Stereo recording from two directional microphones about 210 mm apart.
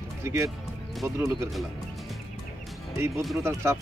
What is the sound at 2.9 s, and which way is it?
Speech, 10° right (ahead or behind).